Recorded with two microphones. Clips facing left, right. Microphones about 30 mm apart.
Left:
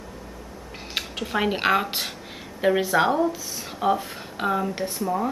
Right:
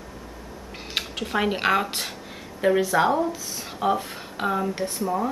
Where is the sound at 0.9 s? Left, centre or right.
Centre.